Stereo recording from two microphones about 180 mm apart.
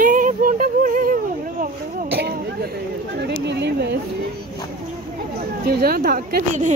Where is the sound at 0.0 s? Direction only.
45° right (ahead or behind).